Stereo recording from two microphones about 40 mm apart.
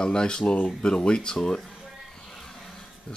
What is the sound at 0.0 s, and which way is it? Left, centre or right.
Speech, centre.